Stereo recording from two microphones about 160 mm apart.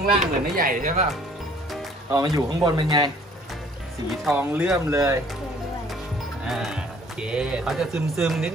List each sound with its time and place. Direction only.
0.2 s speech: 60° right (ahead or behind)
2.1 s speech: 25° right (ahead or behind)
4.4 s speech: 10° right (ahead or behind)
6.4 s speech: centre (ahead or behind)